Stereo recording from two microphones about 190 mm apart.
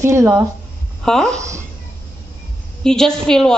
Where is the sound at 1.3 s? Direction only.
15° right (ahead or behind).